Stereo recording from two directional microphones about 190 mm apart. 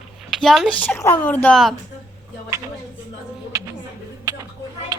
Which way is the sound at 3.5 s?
15° right (ahead or behind).